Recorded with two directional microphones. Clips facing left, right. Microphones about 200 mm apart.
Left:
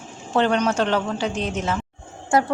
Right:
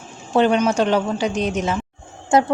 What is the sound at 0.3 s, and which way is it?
A woman's voice, 10° right (ahead or behind).